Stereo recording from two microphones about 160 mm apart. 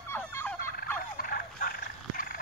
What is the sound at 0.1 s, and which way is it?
Fowl, 15° left (ahead or behind).